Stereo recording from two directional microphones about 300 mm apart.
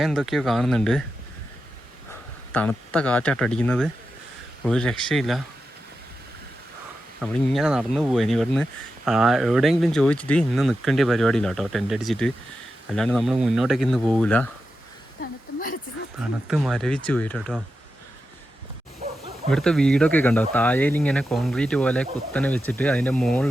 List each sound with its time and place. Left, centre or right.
0.0 s speech: centre
2.5 s speech: centre
7.2 s speech: centre
16.5 s speech: centre
19.5 s speech: centre